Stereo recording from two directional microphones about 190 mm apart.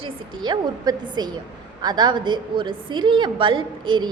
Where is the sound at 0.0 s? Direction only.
25° right (ahead or behind).